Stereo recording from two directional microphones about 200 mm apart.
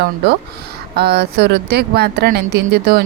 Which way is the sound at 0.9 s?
50° right (ahead or behind).